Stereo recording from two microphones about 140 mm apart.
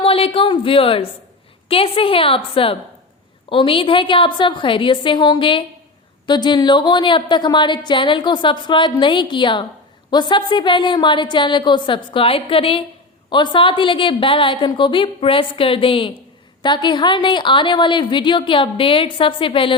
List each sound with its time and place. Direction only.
0.0 s a woman's voice: 40° left (ahead or behind)